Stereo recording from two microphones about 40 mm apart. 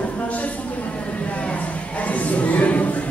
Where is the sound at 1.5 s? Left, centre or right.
Left.